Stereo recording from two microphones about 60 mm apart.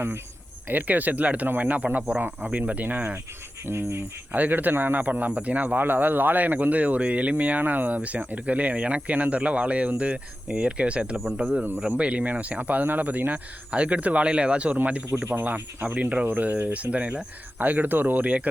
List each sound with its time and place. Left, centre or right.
0.7 s a man's voice: right
3.7 s speech: right
4.3 s a man's voice: right